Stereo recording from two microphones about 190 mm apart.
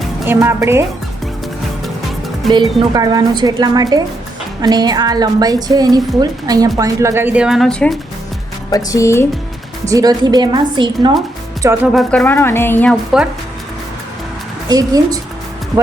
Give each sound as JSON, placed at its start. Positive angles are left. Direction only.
{"t": 0.3, "sound": "a woman's voice", "side_deg": -15}
{"t": 2.5, "sound": "a woman's voice", "side_deg": -20}
{"t": 8.7, "sound": "a woman's voice", "side_deg": 15}
{"t": 9.8, "sound": "a woman's voice", "side_deg": -20}
{"t": 11.9, "sound": "a woman's voice", "side_deg": 5}
{"t": 14.7, "sound": "a woman's voice", "side_deg": -20}